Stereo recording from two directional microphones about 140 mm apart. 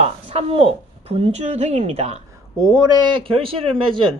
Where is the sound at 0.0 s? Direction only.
50° right (ahead or behind).